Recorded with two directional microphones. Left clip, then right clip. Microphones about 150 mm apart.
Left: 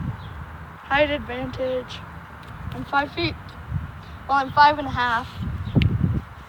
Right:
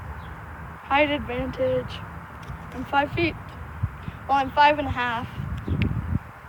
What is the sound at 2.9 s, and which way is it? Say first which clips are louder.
Speech: even; 25° right (ahead or behind).